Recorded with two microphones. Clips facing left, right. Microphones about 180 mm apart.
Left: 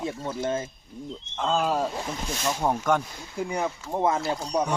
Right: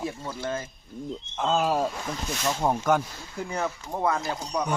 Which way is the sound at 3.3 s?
15° left (ahead or behind).